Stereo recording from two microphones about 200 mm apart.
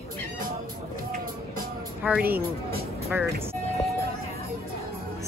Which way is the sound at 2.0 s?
10° right (ahead or behind).